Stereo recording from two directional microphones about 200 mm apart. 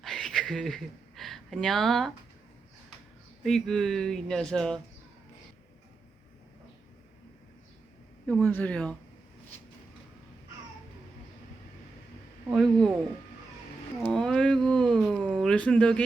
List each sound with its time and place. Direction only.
0.0 s speech: centre (ahead or behind)
3.4 s speech: centre (ahead or behind)
8.3 s speech: 5° left (ahead or behind)
12.5 s speech: centre (ahead or behind)
14.0 s speech: centre (ahead or behind)